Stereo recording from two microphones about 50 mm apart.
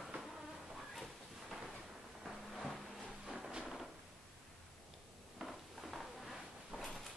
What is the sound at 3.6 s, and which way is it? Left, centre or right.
Hammer, centre.